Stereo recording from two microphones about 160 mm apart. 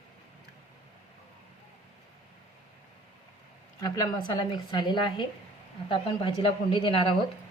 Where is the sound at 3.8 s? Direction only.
20° left (ahead or behind).